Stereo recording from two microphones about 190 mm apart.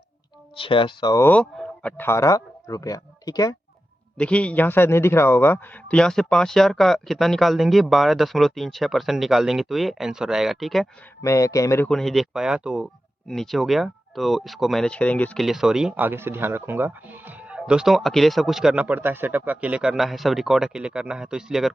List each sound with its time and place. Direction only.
0.5 s speech: 25° left (ahead or behind)
4.2 s speech: 5° left (ahead or behind)
11.2 s speech: 15° left (ahead or behind)
11.9 s speech: centre (ahead or behind)